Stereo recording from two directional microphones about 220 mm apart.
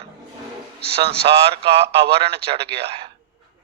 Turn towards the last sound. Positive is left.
turn(degrees=-25)  # may be behind; listen again after turning